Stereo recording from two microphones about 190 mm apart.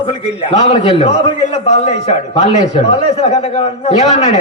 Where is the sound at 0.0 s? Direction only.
30° left (ahead or behind).